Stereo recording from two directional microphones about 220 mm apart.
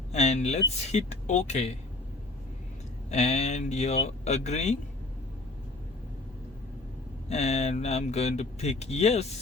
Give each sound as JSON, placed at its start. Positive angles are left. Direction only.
{"t": 0.1, "sound": "speech", "side_deg": 30}
{"t": 3.1, "sound": "speech", "side_deg": 30}
{"t": 7.3, "sound": "speech", "side_deg": 30}